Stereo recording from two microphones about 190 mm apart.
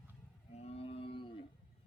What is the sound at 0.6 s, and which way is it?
Whale vocalization, 30° left (ahead or behind).